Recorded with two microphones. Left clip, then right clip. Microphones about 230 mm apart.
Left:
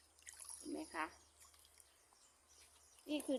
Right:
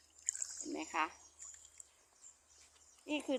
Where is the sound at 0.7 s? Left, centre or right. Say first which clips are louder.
Right 7 dB; right.